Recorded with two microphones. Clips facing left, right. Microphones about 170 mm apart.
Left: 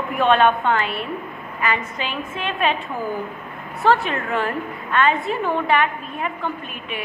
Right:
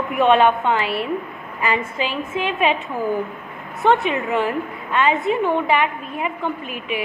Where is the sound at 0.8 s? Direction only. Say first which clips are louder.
Right 3 dB; 75° right (ahead or behind).